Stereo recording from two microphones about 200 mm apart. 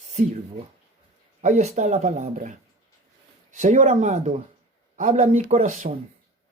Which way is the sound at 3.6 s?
35° right (ahead or behind).